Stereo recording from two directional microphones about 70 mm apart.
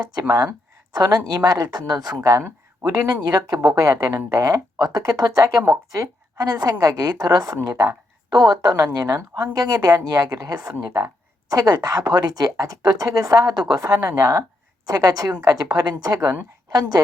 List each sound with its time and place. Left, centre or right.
0.1 s a woman's voice: right
2.8 s a woman's voice: right
3.8 s a woman's voice: right
14.0 s speech: right
14.8 s a woman's voice: right